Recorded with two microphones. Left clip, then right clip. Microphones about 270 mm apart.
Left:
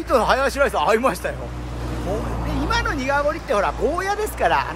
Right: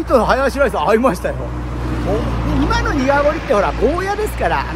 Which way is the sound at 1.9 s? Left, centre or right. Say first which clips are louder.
Right 6 dB; right.